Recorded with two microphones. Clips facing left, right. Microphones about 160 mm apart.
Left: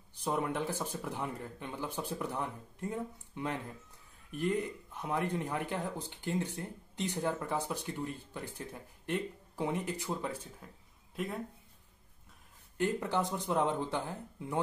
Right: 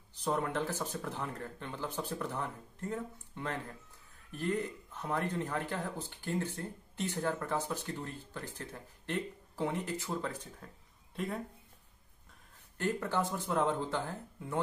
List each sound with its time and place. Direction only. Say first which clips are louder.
0.2 s speech: even; 10° left (ahead or behind)
12.7 s speech: left 1 dB; 15° left (ahead or behind)